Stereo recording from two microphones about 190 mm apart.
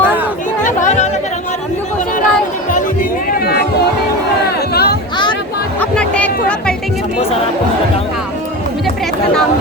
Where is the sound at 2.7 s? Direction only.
50° left (ahead or behind).